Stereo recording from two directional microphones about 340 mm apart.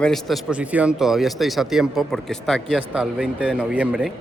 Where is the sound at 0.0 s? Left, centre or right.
Centre.